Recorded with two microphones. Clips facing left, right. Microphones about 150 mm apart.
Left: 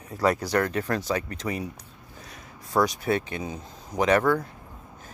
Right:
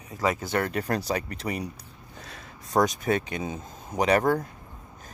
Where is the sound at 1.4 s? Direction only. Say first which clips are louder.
Even; 25° right (ahead or behind).